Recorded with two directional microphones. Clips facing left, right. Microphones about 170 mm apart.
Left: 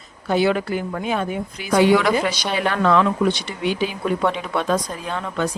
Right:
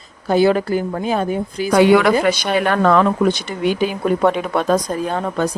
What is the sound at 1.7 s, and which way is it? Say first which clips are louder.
Speech: right 4 dB; 60° right (ahead or behind).